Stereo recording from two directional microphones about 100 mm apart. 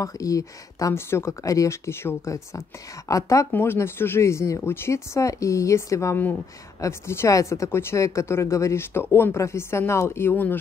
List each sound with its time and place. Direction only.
0.0 s speech: 35° left (ahead or behind)
3.5 s speech: 25° left (ahead or behind)